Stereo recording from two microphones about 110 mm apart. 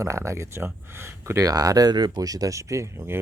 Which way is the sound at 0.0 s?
25° right (ahead or behind).